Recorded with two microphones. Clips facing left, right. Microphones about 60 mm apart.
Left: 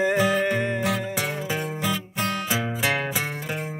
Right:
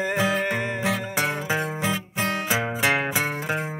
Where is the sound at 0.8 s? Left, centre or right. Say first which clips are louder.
Right 1 dB; right.